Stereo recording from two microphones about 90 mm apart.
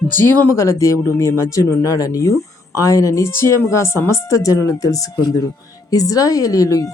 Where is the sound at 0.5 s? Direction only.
35° left (ahead or behind).